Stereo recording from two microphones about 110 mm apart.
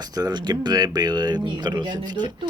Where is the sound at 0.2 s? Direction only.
40° right (ahead or behind).